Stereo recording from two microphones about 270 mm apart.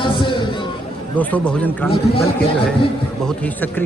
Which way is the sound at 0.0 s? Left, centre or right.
Centre.